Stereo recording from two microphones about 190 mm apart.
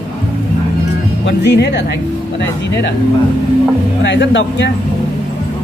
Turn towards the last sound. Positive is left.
turn(degrees=70)  # may be behind; listen again after turning